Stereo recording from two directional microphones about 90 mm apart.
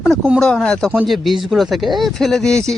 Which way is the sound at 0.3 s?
10° left (ahead or behind).